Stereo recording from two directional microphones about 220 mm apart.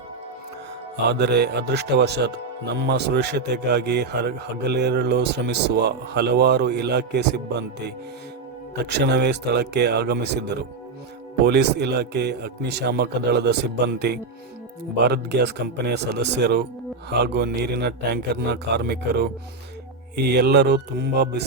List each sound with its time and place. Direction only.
1.2 s speech: 50° right (ahead or behind)
11.4 s speech: 50° right (ahead or behind)